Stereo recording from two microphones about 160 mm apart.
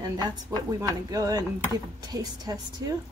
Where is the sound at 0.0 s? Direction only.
20° right (ahead or behind).